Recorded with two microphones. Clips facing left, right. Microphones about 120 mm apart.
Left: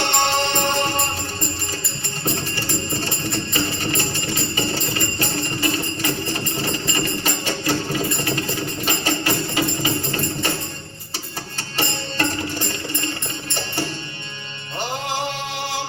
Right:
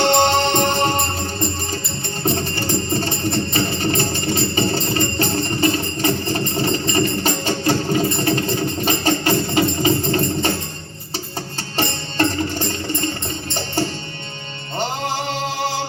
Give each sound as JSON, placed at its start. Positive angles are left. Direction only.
{"t": 0.0, "sound": "music", "side_deg": -30}
{"t": 11.8, "sound": "music", "side_deg": -30}